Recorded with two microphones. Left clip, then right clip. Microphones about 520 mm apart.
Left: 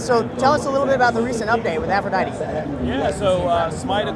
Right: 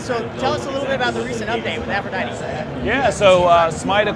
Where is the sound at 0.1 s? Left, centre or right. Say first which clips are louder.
Left 4 dB; left.